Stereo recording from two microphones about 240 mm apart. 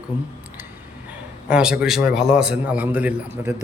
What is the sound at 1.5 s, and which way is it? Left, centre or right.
A man's voice, centre.